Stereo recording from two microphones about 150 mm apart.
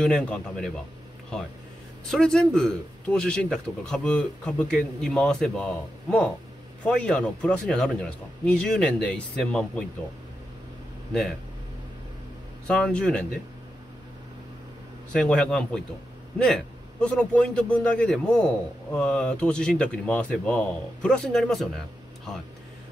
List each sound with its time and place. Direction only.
0.0 s speech: 5° left (ahead or behind)
2.0 s speech: 5° left (ahead or behind)
12.6 s speech: 5° left (ahead or behind)
15.1 s a man's voice: 5° left (ahead or behind)